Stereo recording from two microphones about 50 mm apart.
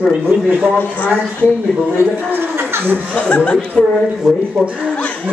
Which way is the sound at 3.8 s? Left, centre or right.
Left.